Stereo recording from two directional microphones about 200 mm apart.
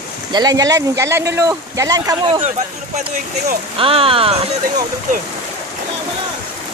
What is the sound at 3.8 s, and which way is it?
Speech, 25° right (ahead or behind).